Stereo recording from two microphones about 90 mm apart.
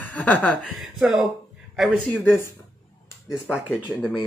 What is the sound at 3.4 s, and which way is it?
Speech, 10° right (ahead or behind).